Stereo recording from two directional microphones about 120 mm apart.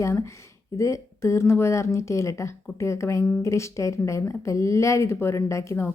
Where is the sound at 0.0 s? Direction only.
25° left (ahead or behind).